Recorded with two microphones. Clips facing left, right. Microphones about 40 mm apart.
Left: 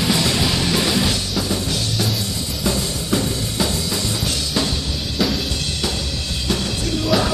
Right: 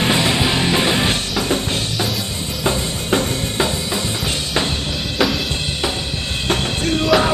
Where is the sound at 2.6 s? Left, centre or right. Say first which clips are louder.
Right 3 dB; right.